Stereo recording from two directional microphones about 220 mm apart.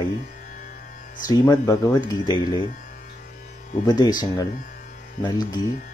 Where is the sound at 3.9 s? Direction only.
20° left (ahead or behind).